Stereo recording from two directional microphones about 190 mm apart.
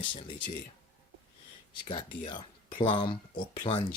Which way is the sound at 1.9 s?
25° left (ahead or behind).